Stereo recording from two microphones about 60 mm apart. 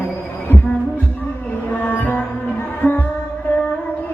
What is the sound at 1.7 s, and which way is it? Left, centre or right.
Music, left.